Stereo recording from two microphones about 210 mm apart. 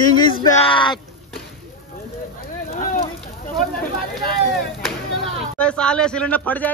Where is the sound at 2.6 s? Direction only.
40° left (ahead or behind).